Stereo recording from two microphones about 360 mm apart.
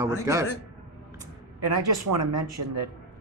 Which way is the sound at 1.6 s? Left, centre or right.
Right.